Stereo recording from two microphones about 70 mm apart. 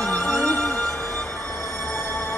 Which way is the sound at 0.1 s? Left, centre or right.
Centre.